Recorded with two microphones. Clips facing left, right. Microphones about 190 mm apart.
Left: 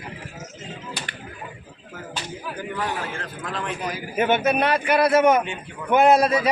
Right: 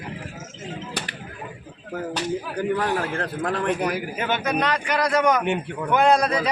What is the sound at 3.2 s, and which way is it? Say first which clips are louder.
Speech: right 6 dB; 60° right (ahead or behind).